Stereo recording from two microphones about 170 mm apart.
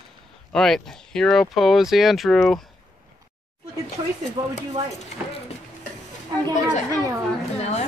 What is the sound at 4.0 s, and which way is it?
Speech, 35° right (ahead or behind).